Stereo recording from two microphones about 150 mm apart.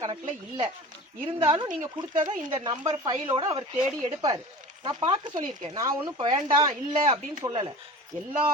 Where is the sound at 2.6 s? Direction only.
30° right (ahead or behind).